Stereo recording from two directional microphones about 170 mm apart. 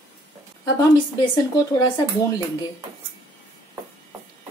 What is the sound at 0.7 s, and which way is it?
Speech, 25° left (ahead or behind).